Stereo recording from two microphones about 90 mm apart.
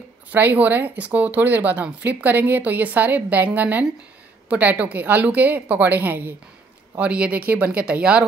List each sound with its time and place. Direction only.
0.3 s a woman's voice: 20° right (ahead or behind)